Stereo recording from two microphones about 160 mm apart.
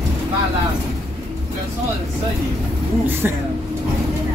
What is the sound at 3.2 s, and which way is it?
Speech, 10° right (ahead or behind).